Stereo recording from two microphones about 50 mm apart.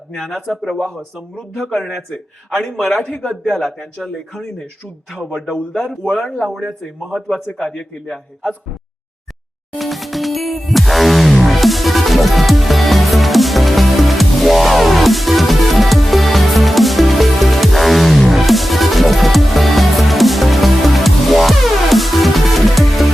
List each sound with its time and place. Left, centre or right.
0.2 s a man's voice: centre
5.5 s speech: centre
6.6 s a man's voice: centre
9.7 s music: centre